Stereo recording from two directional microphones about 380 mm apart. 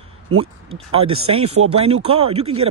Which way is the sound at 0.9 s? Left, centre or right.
Centre.